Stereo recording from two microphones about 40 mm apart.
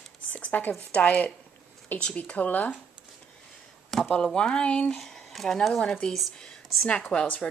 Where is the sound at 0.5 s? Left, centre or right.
Left.